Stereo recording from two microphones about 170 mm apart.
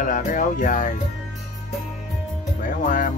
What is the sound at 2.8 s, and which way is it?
Music, 50° left (ahead or behind).